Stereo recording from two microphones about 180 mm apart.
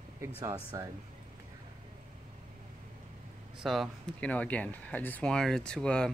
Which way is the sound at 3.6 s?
Centre (ahead or behind).